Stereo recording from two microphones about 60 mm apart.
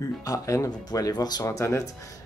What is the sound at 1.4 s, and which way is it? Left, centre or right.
Speech, left.